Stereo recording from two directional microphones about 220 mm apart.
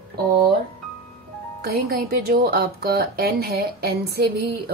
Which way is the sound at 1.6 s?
45° right (ahead or behind).